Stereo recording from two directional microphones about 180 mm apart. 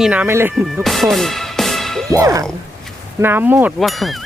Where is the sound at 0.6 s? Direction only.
Centre (ahead or behind).